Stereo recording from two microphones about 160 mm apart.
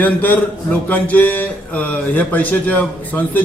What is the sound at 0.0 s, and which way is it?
Speech, 10° left (ahead or behind).